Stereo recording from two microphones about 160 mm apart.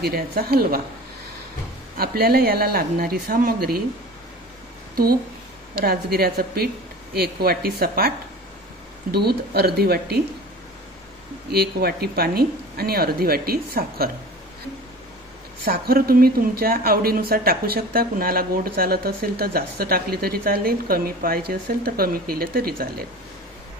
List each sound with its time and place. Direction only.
0.0 s speech: 70° right (ahead or behind)
2.0 s speech: 70° right (ahead or behind)
5.8 s speech: 70° right (ahead or behind)
9.1 s speech: 85° right
11.5 s speech: 75° right (ahead or behind)
15.6 s speech: 70° right (ahead or behind)